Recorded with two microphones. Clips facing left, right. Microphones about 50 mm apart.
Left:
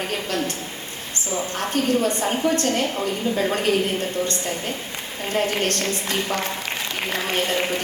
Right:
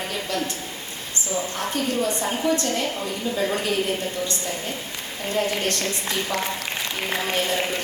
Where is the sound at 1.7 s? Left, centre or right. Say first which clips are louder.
Left 4 dB; left.